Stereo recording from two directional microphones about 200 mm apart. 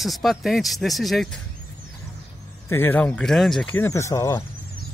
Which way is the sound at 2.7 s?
10° left (ahead or behind).